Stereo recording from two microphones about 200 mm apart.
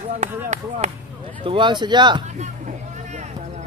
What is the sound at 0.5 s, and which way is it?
Speech, 35° right (ahead or behind).